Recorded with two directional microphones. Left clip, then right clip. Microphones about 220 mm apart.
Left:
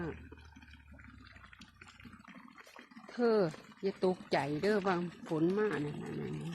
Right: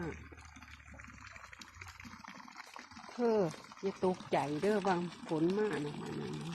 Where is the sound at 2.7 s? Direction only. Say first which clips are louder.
Left 2 dB; 5° left (ahead or behind).